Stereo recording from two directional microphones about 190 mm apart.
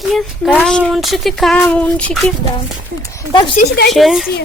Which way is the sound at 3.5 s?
55° left (ahead or behind).